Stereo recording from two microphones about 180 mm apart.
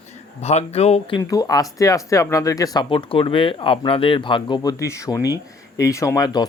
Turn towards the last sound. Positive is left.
turn(degrees=20)  # may be behind; listen again after turning